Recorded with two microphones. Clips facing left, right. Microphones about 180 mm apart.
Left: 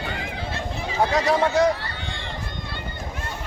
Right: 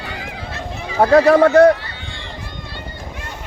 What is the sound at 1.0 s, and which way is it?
Speech, 60° right (ahead or behind).